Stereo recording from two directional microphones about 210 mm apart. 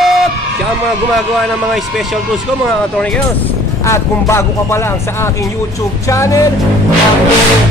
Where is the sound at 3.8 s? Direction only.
15° left (ahead or behind).